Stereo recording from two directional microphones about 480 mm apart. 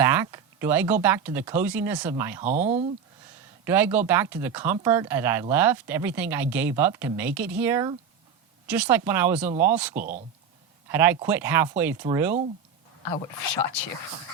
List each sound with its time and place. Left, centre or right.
0.0 s a sound: centre
1.0 s speech: centre
2.4 s speech: centre
9.9 s speech: centre
10.8 s speech: centre